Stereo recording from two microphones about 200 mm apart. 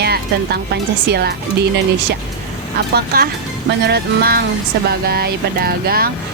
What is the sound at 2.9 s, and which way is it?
Speech, 50° right (ahead or behind).